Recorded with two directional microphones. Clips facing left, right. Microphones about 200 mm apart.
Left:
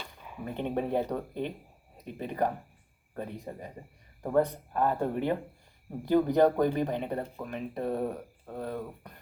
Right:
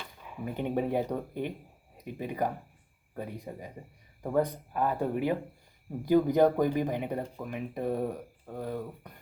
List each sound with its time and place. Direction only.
0.4 s speech: 10° right (ahead or behind)